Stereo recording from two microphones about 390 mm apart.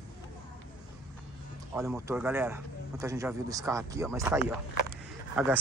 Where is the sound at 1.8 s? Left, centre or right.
Centre.